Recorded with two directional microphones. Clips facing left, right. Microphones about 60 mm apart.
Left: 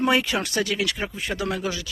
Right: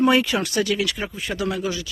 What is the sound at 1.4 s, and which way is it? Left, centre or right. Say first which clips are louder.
Speech: right 2 dB; left.